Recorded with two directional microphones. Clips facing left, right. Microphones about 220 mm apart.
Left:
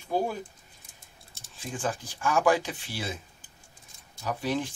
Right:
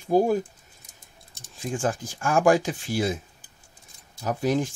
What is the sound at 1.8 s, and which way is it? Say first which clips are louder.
Speech: right 3 dB; 45° right (ahead or behind).